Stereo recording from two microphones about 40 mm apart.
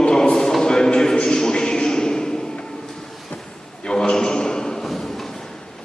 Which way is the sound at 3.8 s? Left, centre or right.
Centre.